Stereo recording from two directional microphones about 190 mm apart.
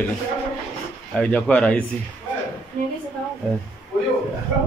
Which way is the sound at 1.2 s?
5° left (ahead or behind).